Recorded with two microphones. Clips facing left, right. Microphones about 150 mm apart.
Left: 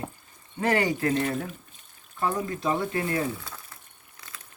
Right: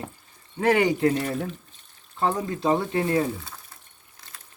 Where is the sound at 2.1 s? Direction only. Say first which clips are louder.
Right 3 dB; 25° right (ahead or behind).